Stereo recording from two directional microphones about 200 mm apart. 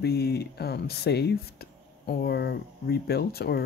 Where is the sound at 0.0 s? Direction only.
55° left (ahead or behind).